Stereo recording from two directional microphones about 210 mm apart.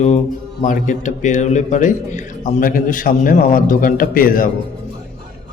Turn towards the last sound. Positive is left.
turn(degrees=40)  # may be behind; listen again after turning